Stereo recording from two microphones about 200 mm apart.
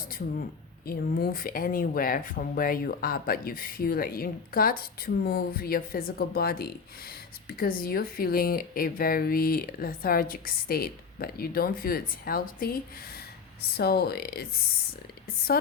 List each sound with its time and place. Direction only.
0.9 s speech: 45° left (ahead or behind)